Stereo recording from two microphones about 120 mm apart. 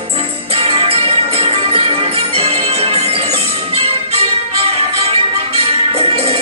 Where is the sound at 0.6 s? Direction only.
50° right (ahead or behind).